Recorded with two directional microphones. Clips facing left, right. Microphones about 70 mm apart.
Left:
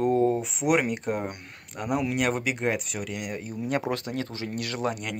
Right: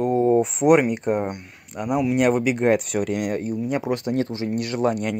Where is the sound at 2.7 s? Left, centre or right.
Right.